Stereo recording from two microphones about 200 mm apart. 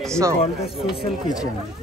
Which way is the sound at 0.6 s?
Centre (ahead or behind).